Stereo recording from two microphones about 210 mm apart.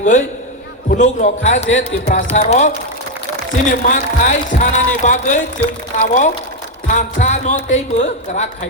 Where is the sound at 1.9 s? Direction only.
50° left (ahead or behind).